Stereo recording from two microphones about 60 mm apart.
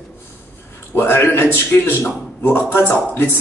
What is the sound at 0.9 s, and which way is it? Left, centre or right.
A man's voice, left.